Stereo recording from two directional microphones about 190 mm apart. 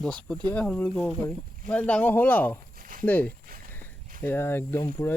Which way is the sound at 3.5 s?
50° right (ahead or behind).